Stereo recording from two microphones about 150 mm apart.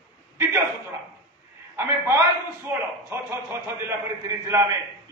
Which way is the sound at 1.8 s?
15° right (ahead or behind).